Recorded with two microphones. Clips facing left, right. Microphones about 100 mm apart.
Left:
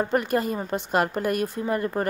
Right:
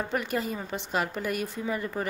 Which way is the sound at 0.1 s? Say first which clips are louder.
Left 6 dB; 45° left (ahead or behind).